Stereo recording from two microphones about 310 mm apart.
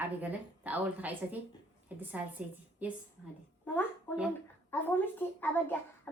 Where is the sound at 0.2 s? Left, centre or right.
Centre.